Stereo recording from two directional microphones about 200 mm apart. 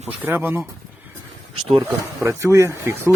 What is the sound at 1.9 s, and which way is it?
Speech, 15° right (ahead or behind).